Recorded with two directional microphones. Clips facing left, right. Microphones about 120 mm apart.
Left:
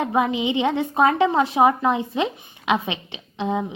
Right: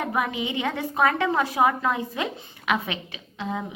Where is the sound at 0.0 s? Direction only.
20° left (ahead or behind).